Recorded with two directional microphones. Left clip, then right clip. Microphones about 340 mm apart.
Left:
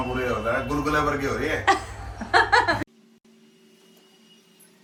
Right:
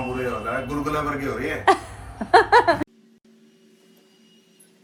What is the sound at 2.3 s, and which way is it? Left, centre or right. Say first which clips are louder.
Music: right 4 dB; centre.